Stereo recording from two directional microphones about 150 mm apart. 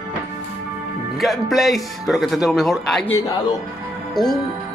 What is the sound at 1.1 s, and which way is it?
A man's voice, centre (ahead or behind).